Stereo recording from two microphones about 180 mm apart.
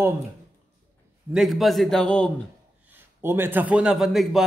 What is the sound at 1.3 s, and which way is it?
A man's voice, centre (ahead or behind).